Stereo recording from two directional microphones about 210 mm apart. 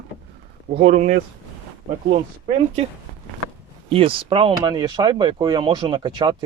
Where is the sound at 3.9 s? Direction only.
25° right (ahead or behind).